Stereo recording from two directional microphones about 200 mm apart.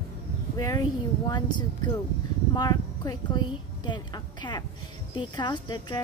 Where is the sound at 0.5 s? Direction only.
20° left (ahead or behind).